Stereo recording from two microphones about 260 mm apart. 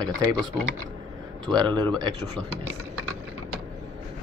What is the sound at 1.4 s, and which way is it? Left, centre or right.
Speech, centre.